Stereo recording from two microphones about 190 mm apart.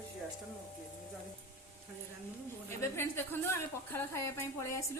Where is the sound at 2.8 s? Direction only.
10° left (ahead or behind).